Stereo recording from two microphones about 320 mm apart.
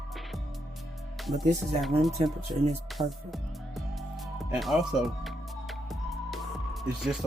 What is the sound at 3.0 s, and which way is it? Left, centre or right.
Speech, centre.